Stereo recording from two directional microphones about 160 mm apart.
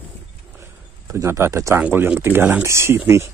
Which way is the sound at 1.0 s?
15° right (ahead or behind).